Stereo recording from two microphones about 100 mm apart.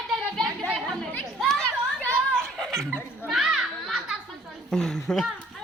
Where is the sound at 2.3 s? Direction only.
5° left (ahead or behind).